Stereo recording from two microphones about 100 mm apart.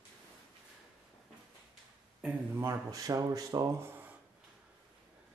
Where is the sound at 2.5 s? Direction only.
30° right (ahead or behind).